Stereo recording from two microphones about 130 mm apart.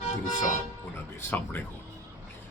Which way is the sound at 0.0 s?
75° left (ahead or behind).